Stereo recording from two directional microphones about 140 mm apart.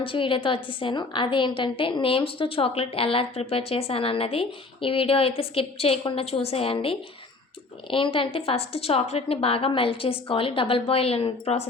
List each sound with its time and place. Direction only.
0.0 s a woman's voice: 40° left (ahead or behind)